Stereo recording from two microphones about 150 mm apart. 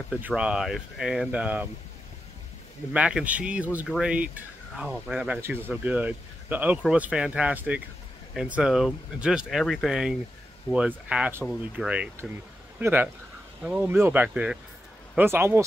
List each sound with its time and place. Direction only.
0.1 s speech: 5° right (ahead or behind)
2.9 s speech: 5° right (ahead or behind)
3.8 s speech: centre (ahead or behind)
4.1 s speech: 10° right (ahead or behind)